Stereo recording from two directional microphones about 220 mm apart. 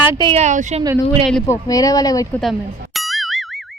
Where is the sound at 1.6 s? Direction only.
15° left (ahead or behind).